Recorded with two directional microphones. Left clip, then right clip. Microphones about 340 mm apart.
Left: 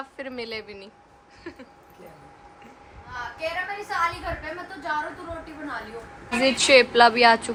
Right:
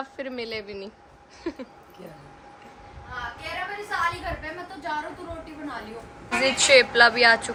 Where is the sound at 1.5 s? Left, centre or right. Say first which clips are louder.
Right 7 dB; centre.